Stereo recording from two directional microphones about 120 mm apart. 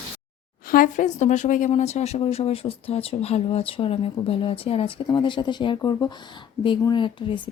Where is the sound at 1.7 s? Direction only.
65° left (ahead or behind).